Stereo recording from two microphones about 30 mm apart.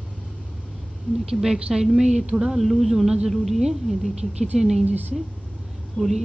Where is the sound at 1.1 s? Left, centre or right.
Left.